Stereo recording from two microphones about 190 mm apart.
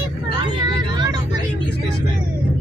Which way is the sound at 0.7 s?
25° right (ahead or behind).